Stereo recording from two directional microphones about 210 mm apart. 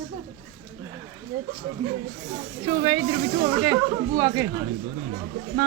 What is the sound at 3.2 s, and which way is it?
Speech, 60° right (ahead or behind).